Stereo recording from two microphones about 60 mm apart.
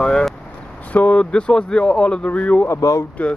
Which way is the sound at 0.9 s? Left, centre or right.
Centre.